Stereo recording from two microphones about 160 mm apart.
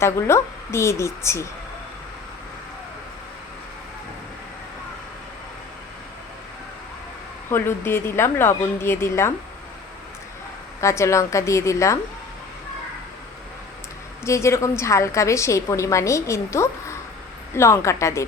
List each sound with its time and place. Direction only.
0.0 s a woman's voice: 15° left (ahead or behind)
7.5 s a woman's voice: 15° left (ahead or behind)
10.8 s a woman's voice: 20° left (ahead or behind)
14.3 s a woman's voice: 15° left (ahead or behind)